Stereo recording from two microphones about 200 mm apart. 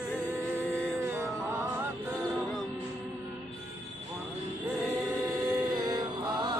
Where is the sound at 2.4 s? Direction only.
Centre (ahead or behind).